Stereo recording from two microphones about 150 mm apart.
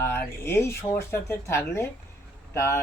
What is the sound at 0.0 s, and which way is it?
Speech, 15° left (ahead or behind).